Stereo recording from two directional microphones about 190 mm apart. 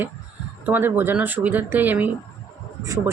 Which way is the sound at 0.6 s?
10° right (ahead or behind).